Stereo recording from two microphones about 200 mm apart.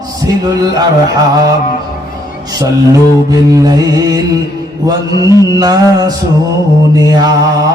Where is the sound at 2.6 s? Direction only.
20° right (ahead or behind).